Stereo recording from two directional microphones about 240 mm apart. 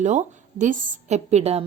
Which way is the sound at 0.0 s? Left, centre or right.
Right.